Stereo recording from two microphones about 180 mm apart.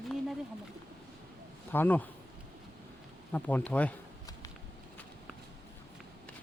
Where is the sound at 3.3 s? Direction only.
10° left (ahead or behind).